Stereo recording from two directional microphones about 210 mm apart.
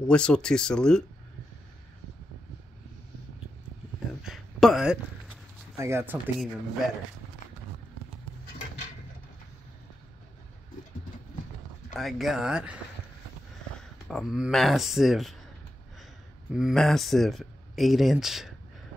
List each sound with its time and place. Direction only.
0.1 s speech: 5° left (ahead or behind)
4.2 s a sound: centre (ahead or behind)
5.8 s speech: 10° right (ahead or behind)
11.9 s speech: centre (ahead or behind)
16.5 s speech: centre (ahead or behind)